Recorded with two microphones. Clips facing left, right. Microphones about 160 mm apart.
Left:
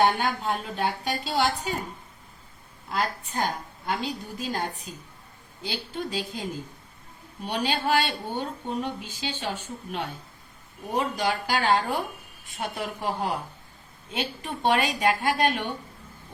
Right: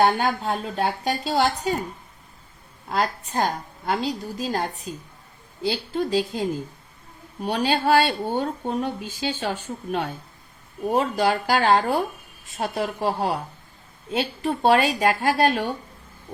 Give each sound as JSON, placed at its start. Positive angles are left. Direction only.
{"t": 0.0, "sound": "a woman's voice", "side_deg": -40}
{"t": 2.9, "sound": "a woman's voice", "side_deg": -40}
{"t": 5.6, "sound": "a woman's voice", "side_deg": -40}
{"t": 7.4, "sound": "speech", "side_deg": -45}
{"t": 10.9, "sound": "a woman's voice", "side_deg": -45}